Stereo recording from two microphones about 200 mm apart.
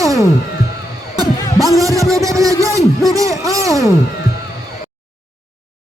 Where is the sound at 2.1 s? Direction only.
15° right (ahead or behind).